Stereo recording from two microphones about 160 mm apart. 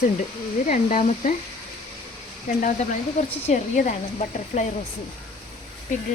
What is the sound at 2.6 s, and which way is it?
Speech, 50° left (ahead or behind).